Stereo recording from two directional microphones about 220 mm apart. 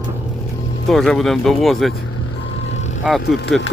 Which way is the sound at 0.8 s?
Centre (ahead or behind).